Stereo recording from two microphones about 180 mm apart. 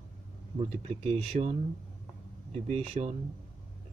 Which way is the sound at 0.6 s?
35° right (ahead or behind).